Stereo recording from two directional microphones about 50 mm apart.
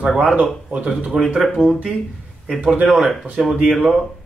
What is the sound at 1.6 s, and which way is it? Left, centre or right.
Speech, right.